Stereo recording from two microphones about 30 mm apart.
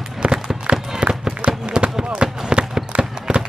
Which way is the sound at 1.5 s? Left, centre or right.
Right.